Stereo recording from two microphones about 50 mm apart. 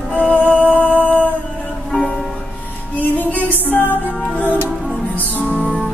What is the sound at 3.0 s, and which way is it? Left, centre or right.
Music, left.